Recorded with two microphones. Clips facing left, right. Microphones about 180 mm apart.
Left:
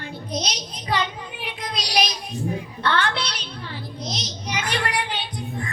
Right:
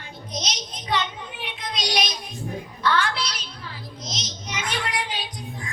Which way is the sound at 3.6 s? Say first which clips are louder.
Left 7 dB; centre (ahead or behind).